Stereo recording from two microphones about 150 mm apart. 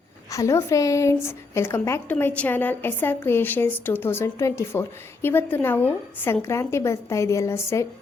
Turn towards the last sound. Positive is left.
turn(degrees=15)  # may be behind; listen again after turning